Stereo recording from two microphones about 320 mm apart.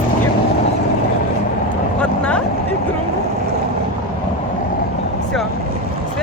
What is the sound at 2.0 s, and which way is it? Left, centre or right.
Vehicle, centre.